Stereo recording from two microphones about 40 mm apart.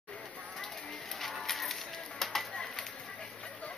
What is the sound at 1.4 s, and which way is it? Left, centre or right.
Music, centre.